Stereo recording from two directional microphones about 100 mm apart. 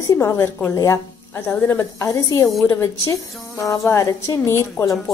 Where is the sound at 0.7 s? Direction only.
30° left (ahead or behind).